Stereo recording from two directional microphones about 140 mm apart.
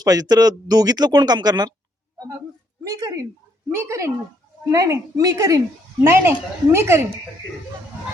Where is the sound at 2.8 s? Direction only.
25° right (ahead or behind).